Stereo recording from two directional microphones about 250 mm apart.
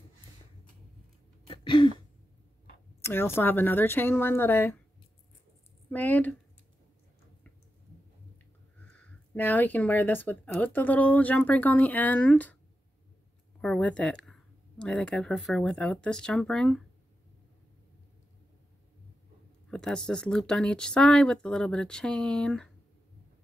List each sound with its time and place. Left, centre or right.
1.5 s throat clearing: centre
3.0 s speech: centre
5.9 s speech: centre
8.7 s speech: centre
13.6 s speech: centre
19.7 s speech: centre